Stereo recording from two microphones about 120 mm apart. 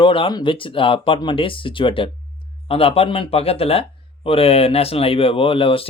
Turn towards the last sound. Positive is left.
turn(degrees=50)  # may be behind; listen again after turning